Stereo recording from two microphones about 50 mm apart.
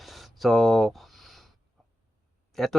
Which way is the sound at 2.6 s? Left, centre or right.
Centre.